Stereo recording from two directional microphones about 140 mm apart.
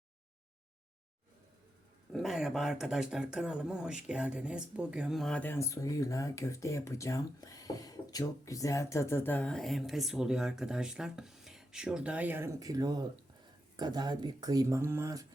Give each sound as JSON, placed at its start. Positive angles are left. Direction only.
{"t": 2.1, "sound": "speech", "side_deg": 0}
{"t": 5.4, "sound": "speech", "side_deg": 20}